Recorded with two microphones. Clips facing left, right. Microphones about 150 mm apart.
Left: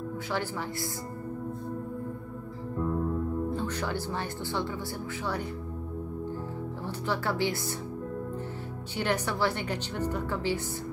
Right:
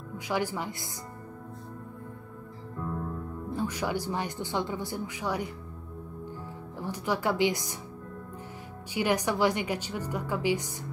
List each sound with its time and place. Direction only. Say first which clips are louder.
0.3 s speech: right 4 dB; 15° right (ahead or behind)
3.5 s speech: right 1 dB; 10° right (ahead or behind)
6.8 s speech: right 3 dB; 15° right (ahead or behind)
8.9 s speech: right 3 dB; 10° right (ahead or behind)